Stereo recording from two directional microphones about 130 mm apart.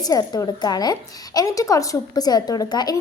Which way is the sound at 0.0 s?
30° left (ahead or behind).